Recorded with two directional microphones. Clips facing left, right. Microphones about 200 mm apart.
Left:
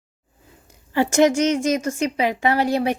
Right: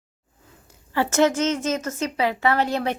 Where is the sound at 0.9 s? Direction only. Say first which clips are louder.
Left 3 dB; 15° left (ahead or behind).